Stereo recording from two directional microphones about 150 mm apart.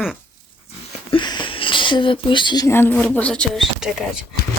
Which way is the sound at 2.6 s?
15° left (ahead or behind).